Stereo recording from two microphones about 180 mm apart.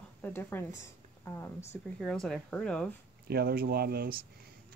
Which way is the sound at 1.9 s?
Centre (ahead or behind).